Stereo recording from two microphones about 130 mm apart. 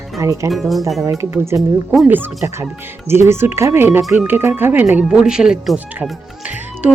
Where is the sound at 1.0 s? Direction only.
20° right (ahead or behind).